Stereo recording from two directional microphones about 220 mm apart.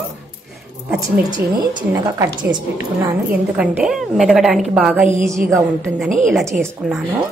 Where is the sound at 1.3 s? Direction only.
20° right (ahead or behind).